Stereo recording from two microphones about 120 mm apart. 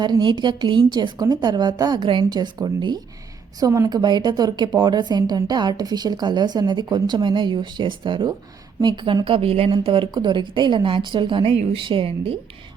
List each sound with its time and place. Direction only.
0.0 s a woman's voice: 40° right (ahead or behind)
3.6 s a woman's voice: 25° right (ahead or behind)
3.8 s a woman's voice: 35° right (ahead or behind)